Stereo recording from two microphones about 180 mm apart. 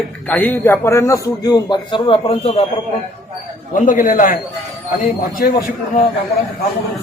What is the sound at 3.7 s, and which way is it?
Speech, 45° left (ahead or behind).